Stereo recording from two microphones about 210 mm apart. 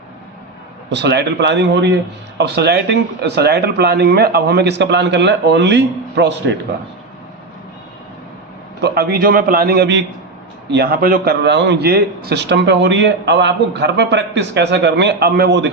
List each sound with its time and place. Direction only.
0.9 s a man's voice: 55° right (ahead or behind)
8.8 s a man's voice: 50° right (ahead or behind)